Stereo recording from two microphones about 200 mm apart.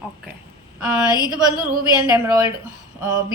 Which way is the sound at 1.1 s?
20° left (ahead or behind).